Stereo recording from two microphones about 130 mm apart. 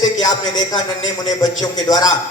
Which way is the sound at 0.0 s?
30° left (ahead or behind).